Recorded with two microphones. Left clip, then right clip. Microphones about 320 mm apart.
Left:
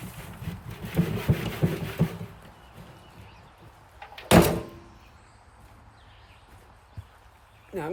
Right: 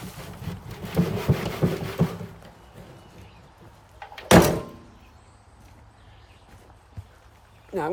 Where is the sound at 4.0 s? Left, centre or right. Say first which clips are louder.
Right 3 dB; right.